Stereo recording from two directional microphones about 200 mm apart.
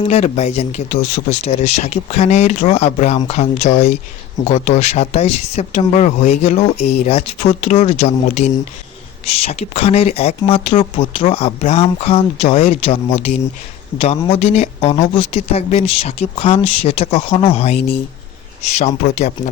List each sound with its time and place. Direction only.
0.1 s speech: 35° left (ahead or behind)
18.8 s speech: 35° left (ahead or behind)